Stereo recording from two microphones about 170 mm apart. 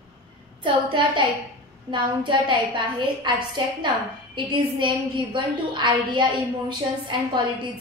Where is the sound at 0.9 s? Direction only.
30° right (ahead or behind).